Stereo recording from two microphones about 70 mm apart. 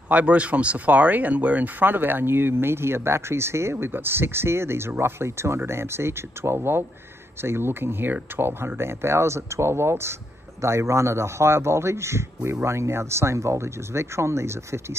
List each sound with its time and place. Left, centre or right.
0.1 s speech: centre; by 15.0 s right